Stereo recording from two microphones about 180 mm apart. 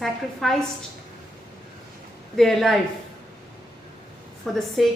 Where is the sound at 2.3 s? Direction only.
Centre (ahead or behind).